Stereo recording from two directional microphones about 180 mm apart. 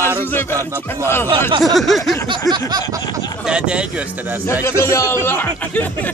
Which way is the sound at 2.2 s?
25° right (ahead or behind).